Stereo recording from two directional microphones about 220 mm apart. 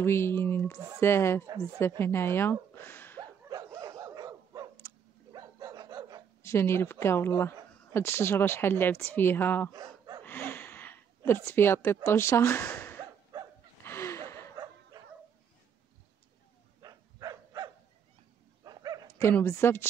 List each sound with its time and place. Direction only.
0.0 s a woman's voice: 10° left (ahead or behind)
3.2 s dog: 15° right (ahead or behind)
6.4 s a woman's voice: 10° left (ahead or behind)
9.7 s gasp: 20° right (ahead or behind)
10.2 s a sound: 10° left (ahead or behind)
13.3 s dog: 15° right (ahead or behind)
13.8 s a sound: 10° left (ahead or behind)
16.8 s dog: 15° right (ahead or behind)
19.1 s a woman's voice: 10° left (ahead or behind)